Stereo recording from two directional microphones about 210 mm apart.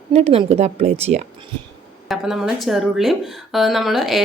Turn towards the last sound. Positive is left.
turn(degrees=0)  # may be behind; listen again after turning